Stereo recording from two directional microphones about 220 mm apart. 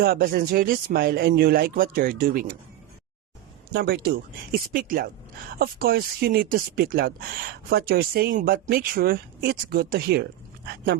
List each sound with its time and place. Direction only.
0.0 s speech: 45° right (ahead or behind)
3.7 s speech: 45° right (ahead or behind)